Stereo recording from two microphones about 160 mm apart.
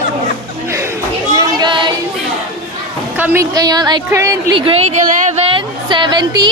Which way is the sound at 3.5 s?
25° right (ahead or behind).